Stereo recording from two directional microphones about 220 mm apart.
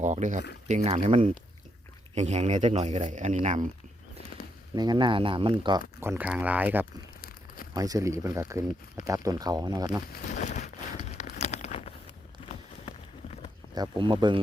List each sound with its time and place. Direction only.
0.0 s speech: 35° right (ahead or behind)
4.7 s speech: 20° right (ahead or behind)
6.0 s speech: 10° right (ahead or behind)
7.2 s crumpling: 40° left (ahead or behind)
7.7 s speech: 15° right (ahead or behind)
10.4 s a sound: 30° left (ahead or behind)
13.7 s speech: 20° right (ahead or behind)